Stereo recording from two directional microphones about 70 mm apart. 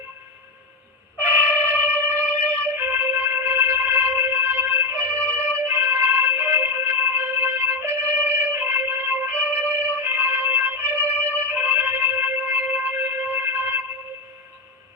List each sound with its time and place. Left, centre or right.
1.2 s trumpet: right
2.0 s music: left
2.7 s music: right
5.0 s music: centre
5.6 s music: right
11.0 s music: left
11.4 s music: right